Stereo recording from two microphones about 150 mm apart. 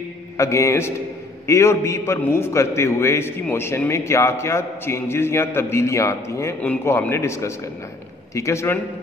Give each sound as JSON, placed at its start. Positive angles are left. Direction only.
{"t": 0.4, "sound": "a man's voice", "side_deg": 20}